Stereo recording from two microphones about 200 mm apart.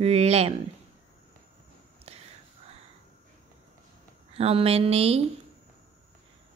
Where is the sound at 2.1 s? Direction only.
30° right (ahead or behind).